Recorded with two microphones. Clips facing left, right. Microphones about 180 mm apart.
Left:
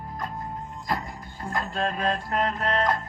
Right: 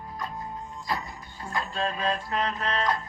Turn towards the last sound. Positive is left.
turn(degrees=50)  # may be behind; listen again after turning